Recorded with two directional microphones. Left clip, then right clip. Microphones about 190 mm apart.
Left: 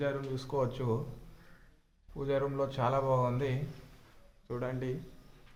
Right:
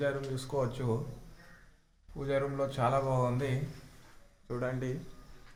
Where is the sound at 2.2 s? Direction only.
Centre (ahead or behind).